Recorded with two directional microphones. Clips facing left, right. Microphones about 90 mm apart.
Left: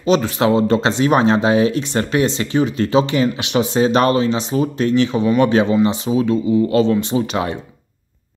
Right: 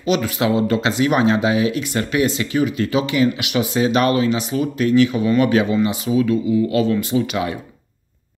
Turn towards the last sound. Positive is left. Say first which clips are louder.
# left 1 dB
turn(degrees=30)  # may be behind; listen again after turning